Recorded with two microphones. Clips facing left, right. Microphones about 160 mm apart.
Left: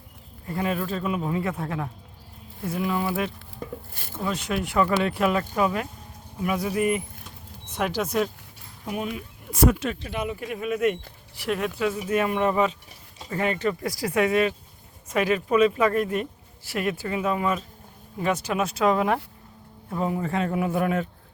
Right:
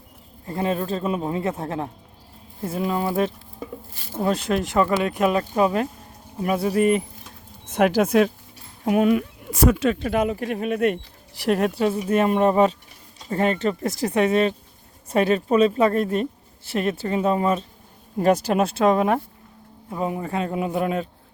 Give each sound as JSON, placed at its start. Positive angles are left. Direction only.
{"t": 0.4, "sound": "a man's voice", "side_deg": -30}
{"t": 4.7, "sound": "a man's voice", "side_deg": -25}
{"t": 7.7, "sound": "speech", "side_deg": -55}
{"t": 10.1, "sound": "a woman's voice", "side_deg": -45}
{"t": 18.6, "sound": "a man's voice", "side_deg": -30}